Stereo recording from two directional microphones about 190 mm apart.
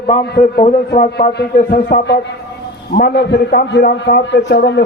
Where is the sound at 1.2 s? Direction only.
55° left (ahead or behind).